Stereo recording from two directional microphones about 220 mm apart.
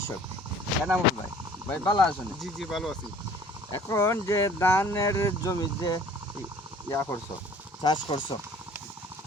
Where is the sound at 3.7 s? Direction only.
10° left (ahead or behind).